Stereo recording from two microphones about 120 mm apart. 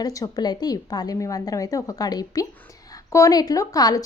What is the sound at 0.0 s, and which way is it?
A woman's voice, 30° left (ahead or behind).